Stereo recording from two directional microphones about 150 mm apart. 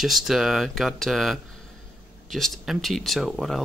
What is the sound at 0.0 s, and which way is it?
Speech, centre (ahead or behind).